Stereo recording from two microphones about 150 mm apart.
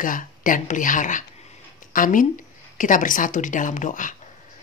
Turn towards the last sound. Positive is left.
turn(degrees=60)  # may be behind; listen again after turning